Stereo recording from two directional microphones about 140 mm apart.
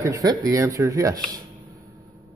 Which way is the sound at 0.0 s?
25° right (ahead or behind).